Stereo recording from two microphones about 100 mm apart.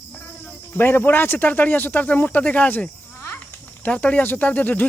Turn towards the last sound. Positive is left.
turn(degrees=15)  # may be behind; listen again after turning